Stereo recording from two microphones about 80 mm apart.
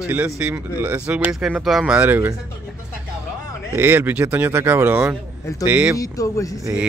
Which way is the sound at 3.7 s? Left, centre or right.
Right.